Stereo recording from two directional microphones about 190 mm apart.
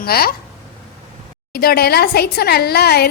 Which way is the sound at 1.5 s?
55° left (ahead or behind).